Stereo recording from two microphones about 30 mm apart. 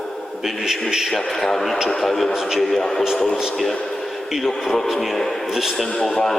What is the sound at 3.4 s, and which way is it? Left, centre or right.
A man's voice, centre.